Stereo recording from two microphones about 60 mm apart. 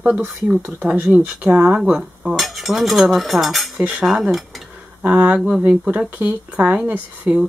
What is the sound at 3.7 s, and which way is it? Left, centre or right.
Cutlery, right.